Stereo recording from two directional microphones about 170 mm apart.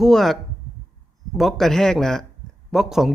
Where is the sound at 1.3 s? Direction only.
Centre (ahead or behind).